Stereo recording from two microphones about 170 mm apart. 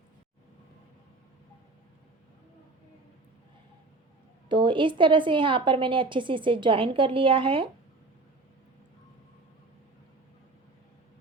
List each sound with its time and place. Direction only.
4.4 s a woman's voice: 30° right (ahead or behind)